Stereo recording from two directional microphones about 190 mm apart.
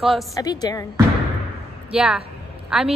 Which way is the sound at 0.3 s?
20° left (ahead or behind).